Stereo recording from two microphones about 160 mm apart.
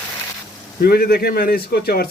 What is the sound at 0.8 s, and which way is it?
A man's voice, 80° left.